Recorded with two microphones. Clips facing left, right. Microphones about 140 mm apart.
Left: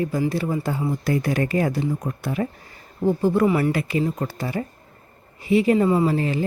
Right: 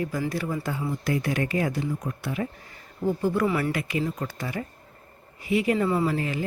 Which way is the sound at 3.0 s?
30° left (ahead or behind).